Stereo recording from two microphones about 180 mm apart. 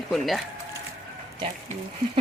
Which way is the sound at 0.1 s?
Centre (ahead or behind).